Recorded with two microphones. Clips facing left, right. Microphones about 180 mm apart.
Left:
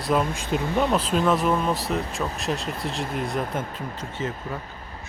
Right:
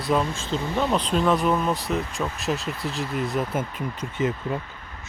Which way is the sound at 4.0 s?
15° right (ahead or behind).